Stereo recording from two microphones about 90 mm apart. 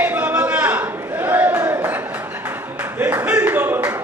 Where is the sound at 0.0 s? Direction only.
20° right (ahead or behind).